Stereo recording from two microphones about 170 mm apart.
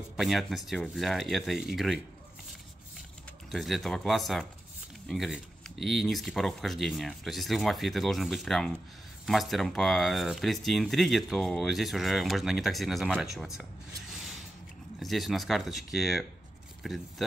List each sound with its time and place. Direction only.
0.2 s speech: centre (ahead or behind)
3.5 s speech: centre (ahead or behind)
13.6 s a sound: 5° right (ahead or behind)
15.0 s speech: centre (ahead or behind)